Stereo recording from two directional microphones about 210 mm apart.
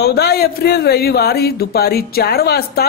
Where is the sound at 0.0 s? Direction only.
50° left (ahead or behind).